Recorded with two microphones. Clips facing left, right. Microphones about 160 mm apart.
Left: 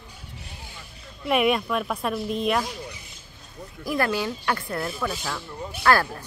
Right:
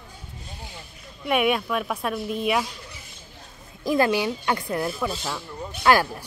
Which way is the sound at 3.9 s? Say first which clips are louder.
Right 4 dB; 20° right (ahead or behind).